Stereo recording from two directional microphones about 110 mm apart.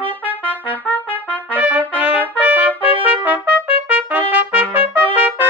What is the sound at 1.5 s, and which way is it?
Trumpet, 15° right (ahead or behind).